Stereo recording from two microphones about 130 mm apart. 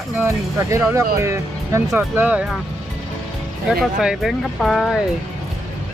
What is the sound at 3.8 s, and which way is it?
Speech, 5° right (ahead or behind).